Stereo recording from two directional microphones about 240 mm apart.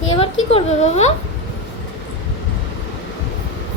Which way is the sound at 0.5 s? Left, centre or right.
Left.